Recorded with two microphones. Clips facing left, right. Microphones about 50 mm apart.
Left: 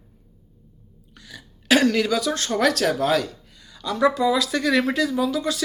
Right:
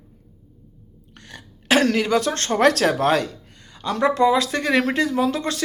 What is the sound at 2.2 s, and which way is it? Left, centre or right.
Speech, right.